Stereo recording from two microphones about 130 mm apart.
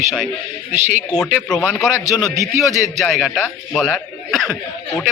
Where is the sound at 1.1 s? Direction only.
5° left (ahead or behind).